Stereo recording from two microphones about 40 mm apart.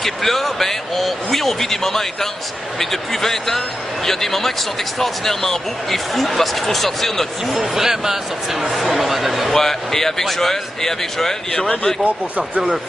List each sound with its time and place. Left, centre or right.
0.0 s speech: centre
7.5 s speech: centre
9.5 s speech: centre
12.0 s speech: right